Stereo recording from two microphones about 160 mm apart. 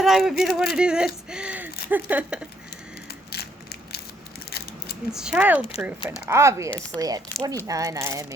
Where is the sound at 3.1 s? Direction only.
80° left.